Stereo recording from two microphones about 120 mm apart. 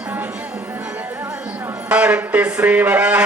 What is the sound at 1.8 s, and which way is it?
A man's voice, 10° right (ahead or behind).